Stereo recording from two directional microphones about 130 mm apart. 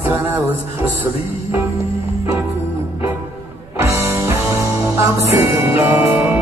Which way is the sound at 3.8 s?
20° right (ahead or behind).